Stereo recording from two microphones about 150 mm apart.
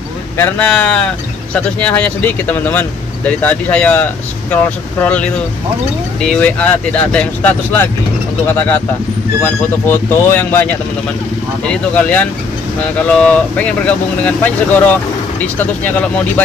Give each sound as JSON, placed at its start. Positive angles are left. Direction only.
{"t": 0.4, "sound": "speech", "side_deg": 10}